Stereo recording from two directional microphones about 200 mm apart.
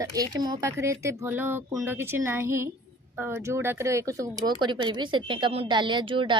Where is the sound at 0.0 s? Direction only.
20° right (ahead or behind).